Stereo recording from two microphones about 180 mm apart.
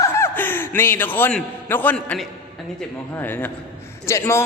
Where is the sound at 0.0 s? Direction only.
15° left (ahead or behind).